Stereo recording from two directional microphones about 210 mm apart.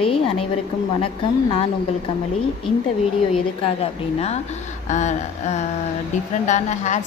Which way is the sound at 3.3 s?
30° left (ahead or behind).